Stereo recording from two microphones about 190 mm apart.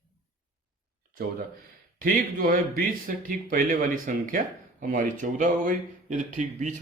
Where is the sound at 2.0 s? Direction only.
50° right (ahead or behind).